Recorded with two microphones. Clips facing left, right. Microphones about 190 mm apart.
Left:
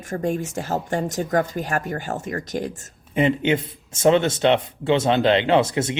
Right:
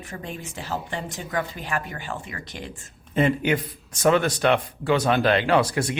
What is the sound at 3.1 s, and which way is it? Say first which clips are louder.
Speech: left 2 dB; 20° left (ahead or behind).